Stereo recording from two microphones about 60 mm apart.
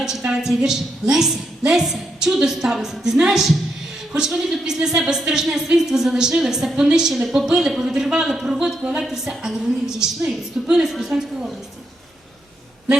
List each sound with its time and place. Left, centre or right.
0.3 s a woman's voice: centre